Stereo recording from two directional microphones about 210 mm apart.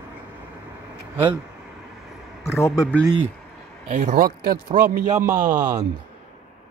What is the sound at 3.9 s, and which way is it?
Speech, 35° right (ahead or behind).